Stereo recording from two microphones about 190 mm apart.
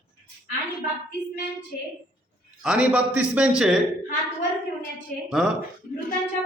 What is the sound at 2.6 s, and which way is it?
A man's voice, 5° right (ahead or behind).